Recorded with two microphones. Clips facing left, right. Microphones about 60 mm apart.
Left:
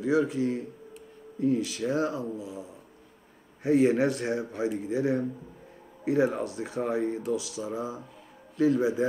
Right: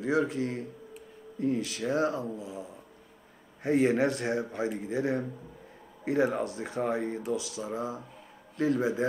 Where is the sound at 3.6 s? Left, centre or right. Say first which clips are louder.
Left 2 dB; right.